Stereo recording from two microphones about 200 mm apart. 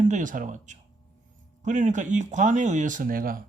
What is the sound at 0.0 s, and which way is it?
A man's voice, 40° right (ahead or behind).